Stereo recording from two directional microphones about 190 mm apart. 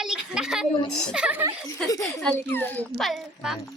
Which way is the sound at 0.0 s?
5° right (ahead or behind).